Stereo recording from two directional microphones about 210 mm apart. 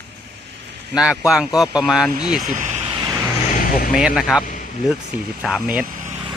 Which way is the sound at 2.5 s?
35° right (ahead or behind).